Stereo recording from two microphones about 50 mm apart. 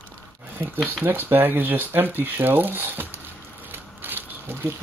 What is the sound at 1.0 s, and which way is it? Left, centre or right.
Speech, right.